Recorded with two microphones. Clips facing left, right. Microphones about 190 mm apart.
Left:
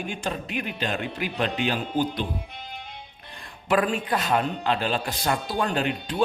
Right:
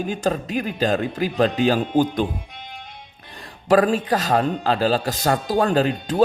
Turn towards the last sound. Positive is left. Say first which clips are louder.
# right 7 dB
turn(degrees=-40)  # may be behind; listen again after turning